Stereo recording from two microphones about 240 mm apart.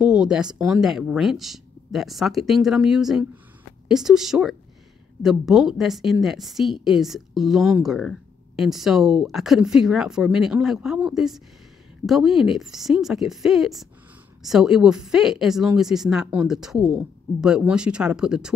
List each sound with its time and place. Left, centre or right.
0.0 s a woman's voice: centre